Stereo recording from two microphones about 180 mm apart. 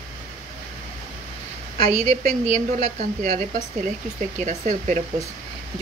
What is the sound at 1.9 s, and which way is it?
Speech, 35° right (ahead or behind).